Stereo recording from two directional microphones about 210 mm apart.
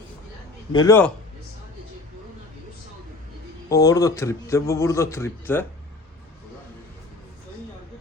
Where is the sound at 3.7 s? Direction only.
15° left (ahead or behind).